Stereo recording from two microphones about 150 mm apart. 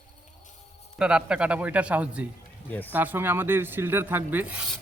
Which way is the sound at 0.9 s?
5° right (ahead or behind).